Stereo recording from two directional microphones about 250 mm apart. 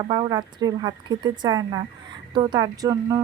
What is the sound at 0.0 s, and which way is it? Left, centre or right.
Speech, centre.